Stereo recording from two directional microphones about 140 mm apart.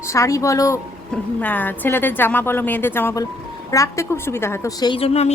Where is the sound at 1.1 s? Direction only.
10° left (ahead or behind).